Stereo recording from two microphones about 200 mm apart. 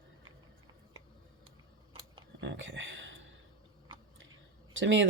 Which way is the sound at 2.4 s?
65° right (ahead or behind).